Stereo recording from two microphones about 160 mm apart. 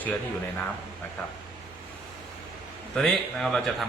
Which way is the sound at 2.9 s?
Centre (ahead or behind).